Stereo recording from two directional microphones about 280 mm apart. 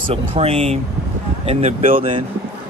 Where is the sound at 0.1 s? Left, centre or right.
Right.